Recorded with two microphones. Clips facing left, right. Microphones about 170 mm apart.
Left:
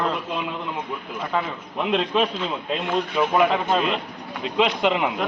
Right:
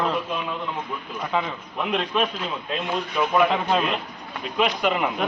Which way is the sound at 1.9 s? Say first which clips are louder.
Left 3 dB; 25° left (ahead or behind).